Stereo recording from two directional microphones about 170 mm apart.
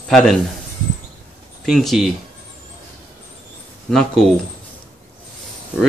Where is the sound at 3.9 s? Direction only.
5° left (ahead or behind).